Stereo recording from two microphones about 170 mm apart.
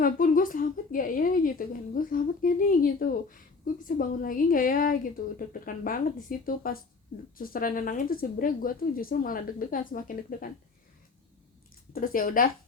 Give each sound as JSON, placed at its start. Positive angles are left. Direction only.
{"t": 0.0, "sound": "a woman's voice", "side_deg": 55}
{"t": 11.9, "sound": "a woman's voice", "side_deg": 55}